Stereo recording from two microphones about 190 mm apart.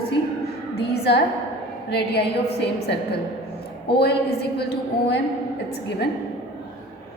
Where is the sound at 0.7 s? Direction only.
60° left (ahead or behind).